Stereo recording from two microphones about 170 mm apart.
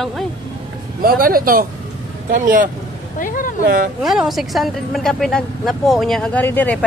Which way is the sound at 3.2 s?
55° left (ahead or behind).